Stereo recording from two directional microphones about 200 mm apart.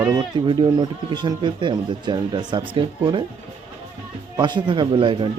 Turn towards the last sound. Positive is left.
turn(degrees=-25)  # may be behind; listen again after turning